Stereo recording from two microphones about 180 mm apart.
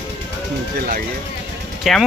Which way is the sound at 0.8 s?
55° right (ahead or behind).